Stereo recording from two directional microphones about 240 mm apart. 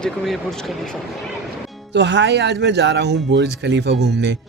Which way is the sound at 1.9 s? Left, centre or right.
Right.